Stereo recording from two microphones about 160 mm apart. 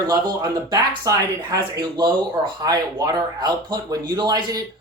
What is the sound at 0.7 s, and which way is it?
Speech, 25° right (ahead or behind).